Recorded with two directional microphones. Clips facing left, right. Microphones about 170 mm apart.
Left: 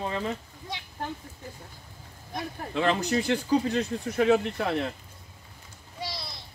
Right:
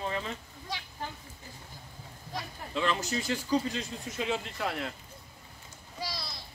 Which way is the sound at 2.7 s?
60° left (ahead or behind).